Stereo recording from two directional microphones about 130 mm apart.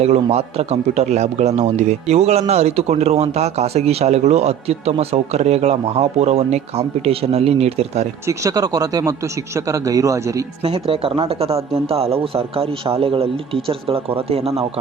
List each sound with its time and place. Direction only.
0.0 s speech: 55° right (ahead or behind)
8.3 s speech: 25° right (ahead or behind)
10.6 s speech: 50° right (ahead or behind)